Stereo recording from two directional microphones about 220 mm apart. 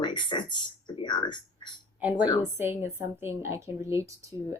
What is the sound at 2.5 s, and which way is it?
A woman's voice, 10° right (ahead or behind).